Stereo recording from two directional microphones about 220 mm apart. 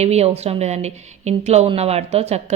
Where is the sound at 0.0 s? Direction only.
30° right (ahead or behind).